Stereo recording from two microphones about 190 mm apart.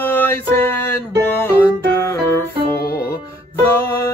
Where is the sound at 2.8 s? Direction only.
55° left (ahead or behind).